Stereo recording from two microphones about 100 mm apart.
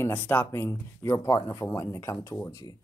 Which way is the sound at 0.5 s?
25° left (ahead or behind).